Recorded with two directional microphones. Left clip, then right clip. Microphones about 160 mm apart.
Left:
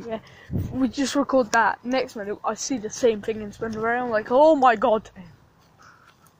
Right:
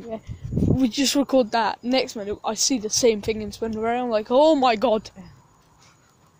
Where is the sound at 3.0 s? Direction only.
40° right (ahead or behind); by 4.4 s 60° right (ahead or behind).